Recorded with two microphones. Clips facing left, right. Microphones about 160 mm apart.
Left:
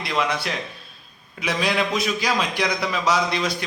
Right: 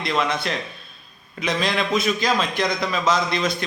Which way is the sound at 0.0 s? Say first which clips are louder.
Right 1 dB; 10° left (ahead or behind).